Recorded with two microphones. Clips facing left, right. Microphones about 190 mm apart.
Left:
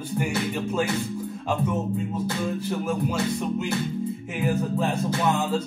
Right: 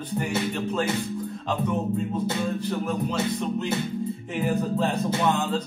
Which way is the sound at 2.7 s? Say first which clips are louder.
Left 1 dB; 5° left (ahead or behind).